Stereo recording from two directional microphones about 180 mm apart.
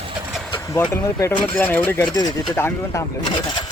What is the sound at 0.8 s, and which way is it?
Speech, 15° left (ahead or behind).